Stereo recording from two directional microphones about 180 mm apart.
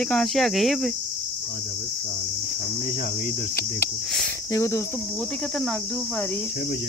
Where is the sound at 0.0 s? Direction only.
5° left (ahead or behind).